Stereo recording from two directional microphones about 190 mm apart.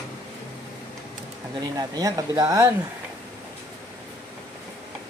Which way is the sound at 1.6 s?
20° right (ahead or behind).